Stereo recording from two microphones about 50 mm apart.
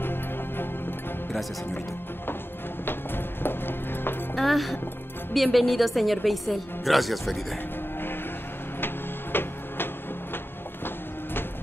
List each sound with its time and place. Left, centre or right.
0.0 s music: left
3.4 s music: left
4.4 s a woman's voice: centre
8.8 s music: left